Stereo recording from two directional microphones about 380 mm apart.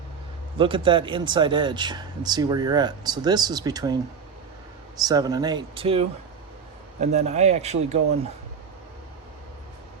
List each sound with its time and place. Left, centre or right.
0.6 s speech: centre
5.0 s speech: centre